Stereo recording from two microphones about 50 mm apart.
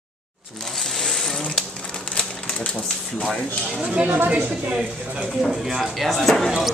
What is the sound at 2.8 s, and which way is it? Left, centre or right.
Speech, centre.